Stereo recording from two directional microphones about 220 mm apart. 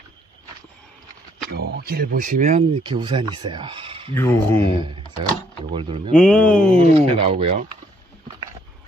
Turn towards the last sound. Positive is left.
turn(degrees=-25)  # may be behind; listen again after turning